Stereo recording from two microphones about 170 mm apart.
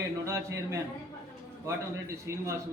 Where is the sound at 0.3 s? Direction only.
15° right (ahead or behind).